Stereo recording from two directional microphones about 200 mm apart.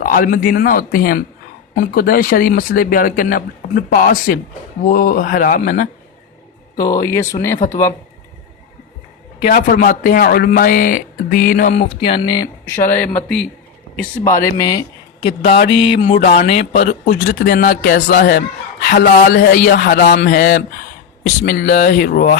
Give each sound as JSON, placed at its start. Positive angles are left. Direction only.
{"t": 0.0, "sound": "a man's voice", "side_deg": 45}
{"t": 6.7, "sound": "speech", "side_deg": 20}
{"t": 7.6, "sound": "speech", "side_deg": 40}
{"t": 9.4, "sound": "speech", "side_deg": 45}
{"t": 15.3, "sound": "a man's voice", "side_deg": 55}
{"t": 15.7, "sound": "speech", "side_deg": 30}
{"t": 16.8, "sound": "a man's voice", "side_deg": 45}